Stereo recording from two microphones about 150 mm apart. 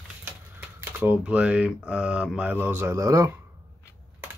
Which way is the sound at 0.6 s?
10° right (ahead or behind).